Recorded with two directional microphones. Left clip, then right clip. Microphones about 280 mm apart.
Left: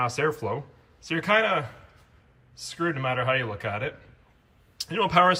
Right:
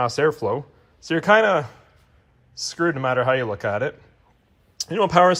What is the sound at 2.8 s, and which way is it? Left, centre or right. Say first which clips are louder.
Speech: right 6 dB; right.